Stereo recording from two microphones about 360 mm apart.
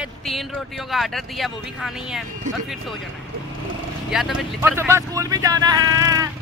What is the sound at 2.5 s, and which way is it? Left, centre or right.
Speech, right.